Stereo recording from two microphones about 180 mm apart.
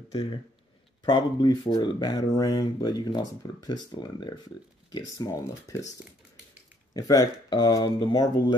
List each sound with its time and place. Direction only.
0.1 s speech: 30° left (ahead or behind)
6.9 s speech: 20° left (ahead or behind)